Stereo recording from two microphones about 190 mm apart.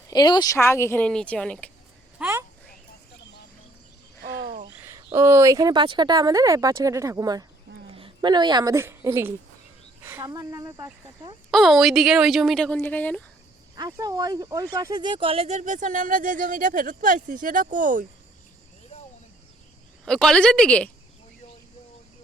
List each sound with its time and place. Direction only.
0.1 s speech: 20° left (ahead or behind); by 1.7 s 5° left (ahead or behind)
2.1 s a sound: 5° right (ahead or behind)
4.8 s speech: 15° right (ahead or behind)
11.5 s speech: centre (ahead or behind)
13.7 s speech: 20° right (ahead or behind); by 18.0 s 45° right (ahead or behind)
20.1 s speech: 5° left (ahead or behind)